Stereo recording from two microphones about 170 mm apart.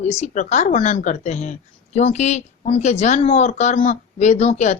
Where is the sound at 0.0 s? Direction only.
40° left (ahead or behind).